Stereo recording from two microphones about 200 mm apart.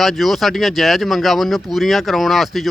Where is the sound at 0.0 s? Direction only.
Centre (ahead or behind).